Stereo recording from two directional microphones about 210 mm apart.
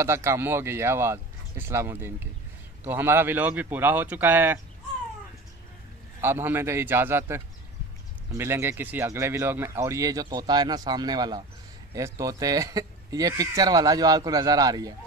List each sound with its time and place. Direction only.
0.0 s speech: 10° right (ahead or behind)
6.2 s speech: 10° right (ahead or behind)